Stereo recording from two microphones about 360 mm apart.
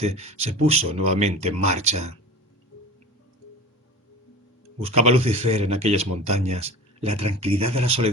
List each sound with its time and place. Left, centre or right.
0.0 s speech: centre
4.8 s speech: centre
7.1 s speech: right
7.3 s speech: centre